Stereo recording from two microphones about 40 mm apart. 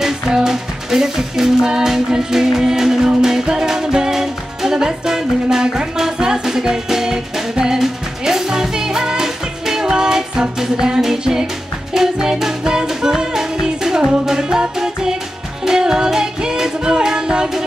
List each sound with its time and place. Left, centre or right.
0.0 s music: centre
15.6 s music: centre